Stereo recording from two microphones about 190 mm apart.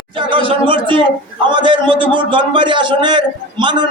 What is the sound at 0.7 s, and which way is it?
A man's voice, 25° right (ahead or behind).